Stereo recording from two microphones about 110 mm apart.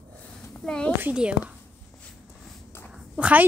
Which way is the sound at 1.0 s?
10° right (ahead or behind).